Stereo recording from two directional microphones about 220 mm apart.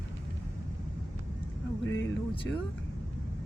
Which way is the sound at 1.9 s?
60° left (ahead or behind).